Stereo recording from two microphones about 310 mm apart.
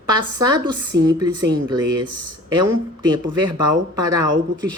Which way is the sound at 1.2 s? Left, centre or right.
Centre.